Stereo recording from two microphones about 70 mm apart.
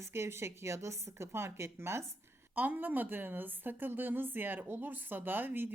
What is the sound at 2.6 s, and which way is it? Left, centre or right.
A woman's voice, right.